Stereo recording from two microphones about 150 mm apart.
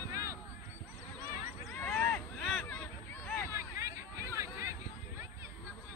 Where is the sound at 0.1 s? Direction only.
20° right (ahead or behind).